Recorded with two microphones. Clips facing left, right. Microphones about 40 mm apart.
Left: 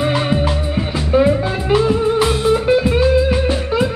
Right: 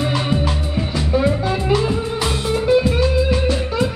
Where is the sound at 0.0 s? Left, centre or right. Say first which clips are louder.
Left 3 dB; left.